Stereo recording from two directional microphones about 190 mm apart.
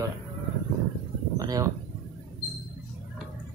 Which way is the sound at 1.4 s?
20° right (ahead or behind).